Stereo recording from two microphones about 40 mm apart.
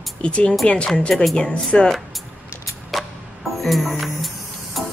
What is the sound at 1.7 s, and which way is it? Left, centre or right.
Speech, left.